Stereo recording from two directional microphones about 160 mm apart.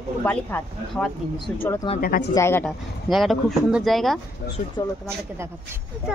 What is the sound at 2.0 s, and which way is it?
Speech, 65° left (ahead or behind).